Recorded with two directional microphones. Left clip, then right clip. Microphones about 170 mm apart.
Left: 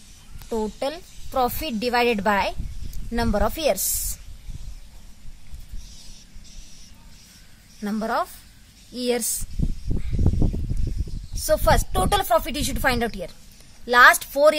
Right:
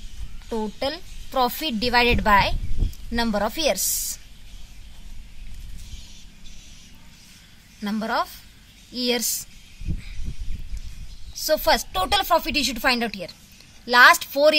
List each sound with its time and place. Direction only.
0.5 s a woman's voice: 10° left (ahead or behind)
7.8 s a woman's voice: 20° left (ahead or behind)
11.4 s a woman's voice: 20° left (ahead or behind)